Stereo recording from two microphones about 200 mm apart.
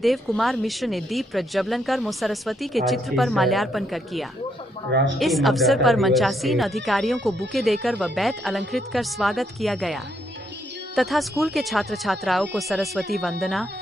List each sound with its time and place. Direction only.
0.0 s speech: centre (ahead or behind)
4.9 s speech: 65° right (ahead or behind)
5.2 s speech: centre (ahead or behind)